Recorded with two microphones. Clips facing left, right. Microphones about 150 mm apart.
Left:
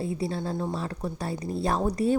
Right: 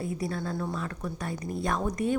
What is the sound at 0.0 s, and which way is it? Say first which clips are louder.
A woman's voice: left 2 dB; 30° left (ahead or behind).